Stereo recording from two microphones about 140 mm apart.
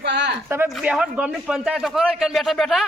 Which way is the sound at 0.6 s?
5° right (ahead or behind).